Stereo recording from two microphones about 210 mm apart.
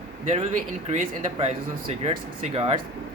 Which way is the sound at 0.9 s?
35° right (ahead or behind).